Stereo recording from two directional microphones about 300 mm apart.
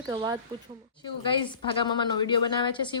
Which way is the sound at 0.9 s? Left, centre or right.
Centre.